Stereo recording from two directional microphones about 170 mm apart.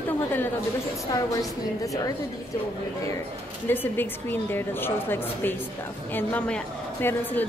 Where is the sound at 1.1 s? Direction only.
20° left (ahead or behind).